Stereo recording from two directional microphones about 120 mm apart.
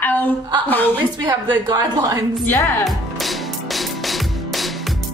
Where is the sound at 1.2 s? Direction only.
30° right (ahead or behind).